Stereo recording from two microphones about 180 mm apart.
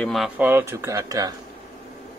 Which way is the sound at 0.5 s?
15° right (ahead or behind).